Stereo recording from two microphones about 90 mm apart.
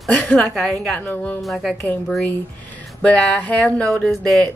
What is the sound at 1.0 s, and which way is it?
Speech, 20° left (ahead or behind).